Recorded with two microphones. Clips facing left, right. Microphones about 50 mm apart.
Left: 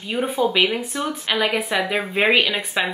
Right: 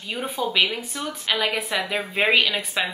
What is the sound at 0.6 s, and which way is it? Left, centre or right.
Speech, left.